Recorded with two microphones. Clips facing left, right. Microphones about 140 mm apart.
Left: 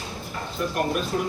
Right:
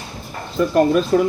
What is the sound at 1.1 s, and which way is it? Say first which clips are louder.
Speech: right 12 dB; 90° right.